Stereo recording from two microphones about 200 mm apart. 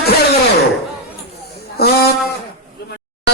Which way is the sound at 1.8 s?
50° left (ahead or behind).